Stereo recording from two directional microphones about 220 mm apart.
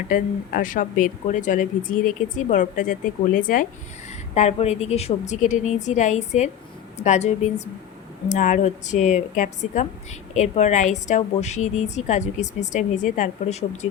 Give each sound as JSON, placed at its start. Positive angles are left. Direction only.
{"t": 0.1, "sound": "a woman's voice", "side_deg": 40}